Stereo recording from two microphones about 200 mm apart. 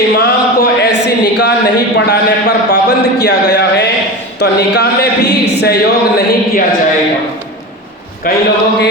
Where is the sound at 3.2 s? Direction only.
60° left (ahead or behind).